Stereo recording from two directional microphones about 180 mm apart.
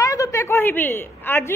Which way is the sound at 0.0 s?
20° left (ahead or behind).